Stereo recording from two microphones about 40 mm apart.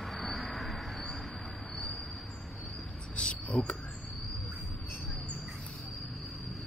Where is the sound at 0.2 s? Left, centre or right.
Centre.